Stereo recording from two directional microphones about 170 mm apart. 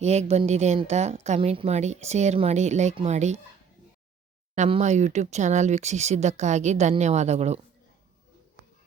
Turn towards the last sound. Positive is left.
turn(degrees=-40)  # may be behind; listen again after turning